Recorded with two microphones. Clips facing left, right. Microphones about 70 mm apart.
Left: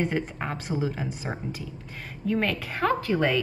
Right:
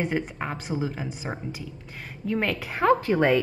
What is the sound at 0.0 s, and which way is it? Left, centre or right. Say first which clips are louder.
A woman's voice: even; centre.